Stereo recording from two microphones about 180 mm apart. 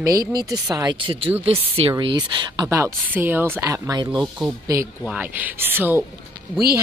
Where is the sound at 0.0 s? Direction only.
20° right (ahead or behind).